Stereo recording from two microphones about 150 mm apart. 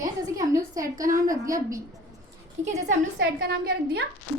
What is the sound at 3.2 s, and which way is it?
Speech, 90° right.